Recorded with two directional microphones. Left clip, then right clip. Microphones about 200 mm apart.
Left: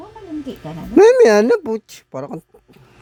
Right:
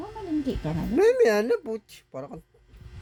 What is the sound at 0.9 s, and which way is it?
Speech, 45° left (ahead or behind).